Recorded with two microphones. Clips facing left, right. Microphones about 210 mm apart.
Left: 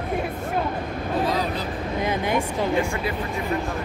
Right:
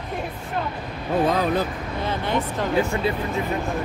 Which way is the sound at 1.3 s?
50° right (ahead or behind).